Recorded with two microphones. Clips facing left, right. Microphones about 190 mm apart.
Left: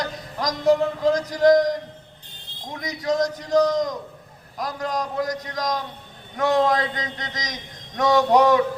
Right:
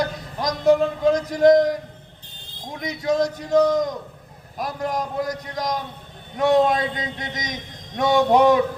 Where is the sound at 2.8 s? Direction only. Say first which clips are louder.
Right 2 dB; 25° right (ahead or behind).